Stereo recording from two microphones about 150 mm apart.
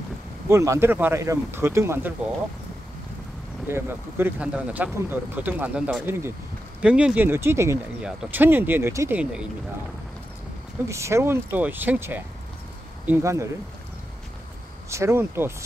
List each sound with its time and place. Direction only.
0.5 s speech: 20° right (ahead or behind)
3.6 s speech: 15° right (ahead or behind)
8.0 s speech: 10° right (ahead or behind)
9.2 s speech: 5° right (ahead or behind)
10.9 s speech: 20° right (ahead or behind)
14.9 s speech: 20° right (ahead or behind)